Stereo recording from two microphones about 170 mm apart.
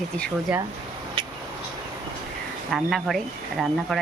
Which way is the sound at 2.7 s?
Centre (ahead or behind).